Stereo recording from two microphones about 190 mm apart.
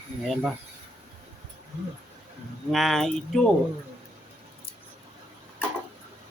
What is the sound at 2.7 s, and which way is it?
Speech, centre (ahead or behind).